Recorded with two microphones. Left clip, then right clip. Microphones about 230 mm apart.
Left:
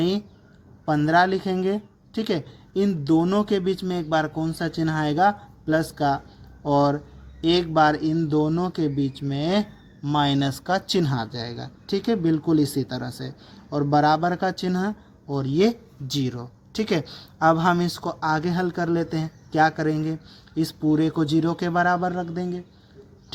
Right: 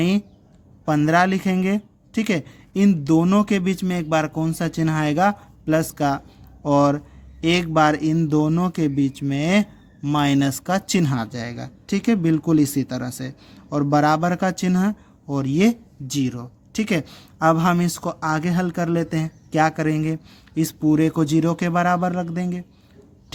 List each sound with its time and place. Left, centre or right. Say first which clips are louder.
0.9 s speech: right 1 dB; right
9.0 s speech: right 4 dB; right
9.5 s speech: right 2 dB; right